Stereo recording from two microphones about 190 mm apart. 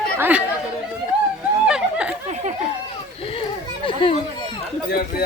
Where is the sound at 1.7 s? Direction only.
5° right (ahead or behind).